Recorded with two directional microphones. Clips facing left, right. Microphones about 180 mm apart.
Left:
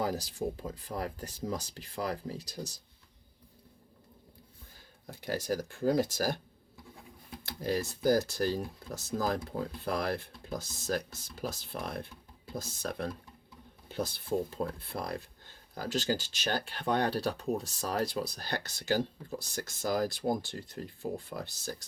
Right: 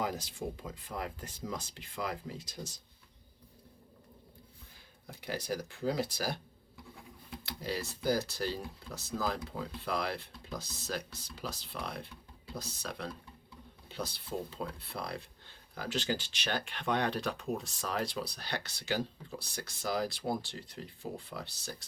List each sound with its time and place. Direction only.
0.0 s speech: 35° left (ahead or behind)
5.2 s speech: 45° left (ahead or behind)
7.4 s speech: 45° left (ahead or behind)